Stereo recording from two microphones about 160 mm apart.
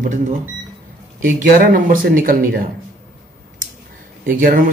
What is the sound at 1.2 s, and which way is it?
Speech, 55° right (ahead or behind).